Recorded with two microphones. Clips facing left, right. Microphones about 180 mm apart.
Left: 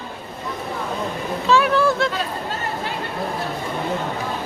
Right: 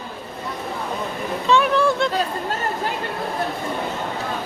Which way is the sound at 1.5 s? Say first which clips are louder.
Even; centre (ahead or behind).